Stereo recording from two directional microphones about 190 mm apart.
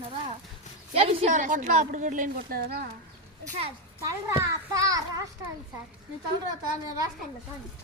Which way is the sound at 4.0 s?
15° right (ahead or behind).